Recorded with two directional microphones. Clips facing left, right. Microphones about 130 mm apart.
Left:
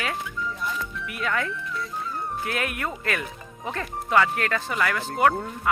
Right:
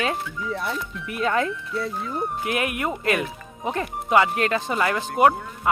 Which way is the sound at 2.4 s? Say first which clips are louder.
Right 3 dB; 15° right (ahead or behind).